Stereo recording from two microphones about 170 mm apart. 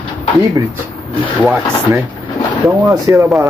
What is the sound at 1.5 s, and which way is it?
Speech, 15° right (ahead or behind).